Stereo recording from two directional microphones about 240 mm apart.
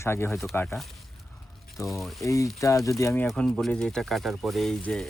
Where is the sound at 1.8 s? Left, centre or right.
Centre.